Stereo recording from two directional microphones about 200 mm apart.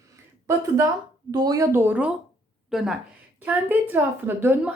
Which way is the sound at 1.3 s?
20° right (ahead or behind).